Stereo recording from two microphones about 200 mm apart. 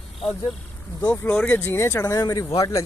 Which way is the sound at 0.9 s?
15° left (ahead or behind).